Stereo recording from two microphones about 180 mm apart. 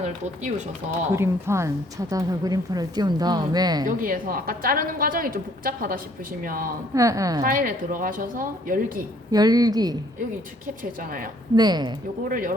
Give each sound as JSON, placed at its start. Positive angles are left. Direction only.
{"t": 1.1, "sound": "a woman's voice", "side_deg": -15}
{"t": 3.8, "sound": "a woman's voice", "side_deg": -50}
{"t": 6.9, "sound": "a woman's voice", "side_deg": -20}
{"t": 7.4, "sound": "a woman's voice", "side_deg": -50}
{"t": 9.3, "sound": "a woman's voice", "side_deg": -20}
{"t": 11.5, "sound": "a woman's voice", "side_deg": -25}
{"t": 12.3, "sound": "a woman's voice", "side_deg": -50}